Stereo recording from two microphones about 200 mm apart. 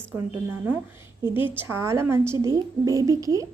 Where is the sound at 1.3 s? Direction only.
10° right (ahead or behind).